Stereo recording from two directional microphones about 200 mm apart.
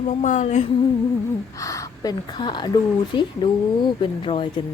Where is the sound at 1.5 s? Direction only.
15° left (ahead or behind).